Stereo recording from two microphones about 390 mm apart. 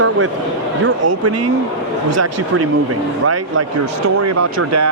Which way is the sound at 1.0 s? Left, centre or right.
Right.